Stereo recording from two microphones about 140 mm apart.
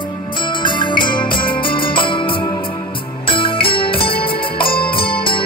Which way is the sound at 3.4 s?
40° left (ahead or behind).